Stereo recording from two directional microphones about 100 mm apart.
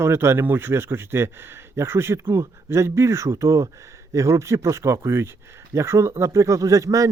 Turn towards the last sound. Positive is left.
turn(degrees=-30)  # may be behind; listen again after turning